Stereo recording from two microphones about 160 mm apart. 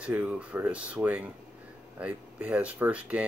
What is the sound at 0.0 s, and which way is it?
Speech, 10° right (ahead or behind).